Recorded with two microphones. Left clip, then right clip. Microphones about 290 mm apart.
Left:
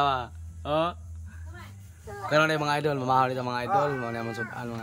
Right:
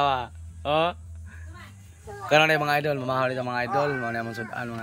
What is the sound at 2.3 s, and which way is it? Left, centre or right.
Speech, centre.